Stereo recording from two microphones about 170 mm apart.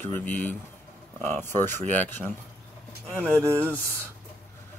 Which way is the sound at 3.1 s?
15° right (ahead or behind).